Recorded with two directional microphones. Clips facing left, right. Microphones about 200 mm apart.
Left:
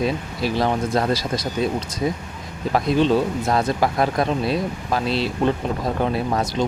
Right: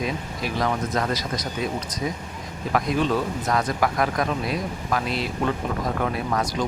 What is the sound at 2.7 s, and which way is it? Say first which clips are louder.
Speech: left 5 dB; 30° left (ahead or behind).